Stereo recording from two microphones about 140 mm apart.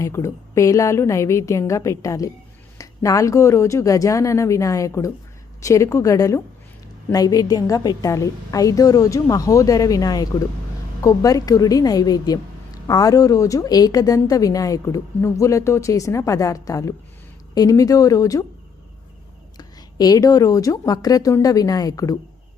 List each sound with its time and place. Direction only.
0.0 s a woman's voice: 20° left (ahead or behind)
19.5 s a woman's voice: 30° left (ahead or behind)